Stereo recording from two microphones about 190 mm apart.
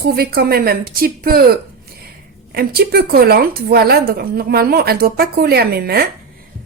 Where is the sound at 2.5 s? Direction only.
55° right (ahead or behind).